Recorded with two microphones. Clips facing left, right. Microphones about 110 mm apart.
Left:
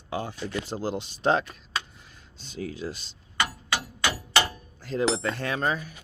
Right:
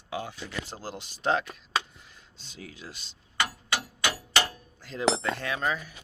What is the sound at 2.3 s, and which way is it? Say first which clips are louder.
Speech: left 11 dB; 45° left (ahead or behind).